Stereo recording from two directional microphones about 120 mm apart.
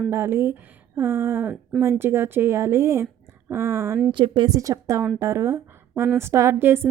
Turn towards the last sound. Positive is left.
turn(degrees=-20)  # may be behind; listen again after turning